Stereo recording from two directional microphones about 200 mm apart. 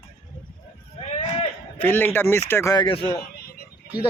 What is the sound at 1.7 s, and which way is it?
Speech, 10° left (ahead or behind).